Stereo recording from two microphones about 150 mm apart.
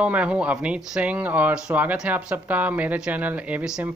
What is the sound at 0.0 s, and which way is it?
Speech, 10° right (ahead or behind).